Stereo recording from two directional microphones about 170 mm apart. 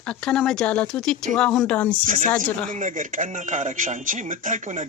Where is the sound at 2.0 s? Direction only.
50° right (ahead or behind).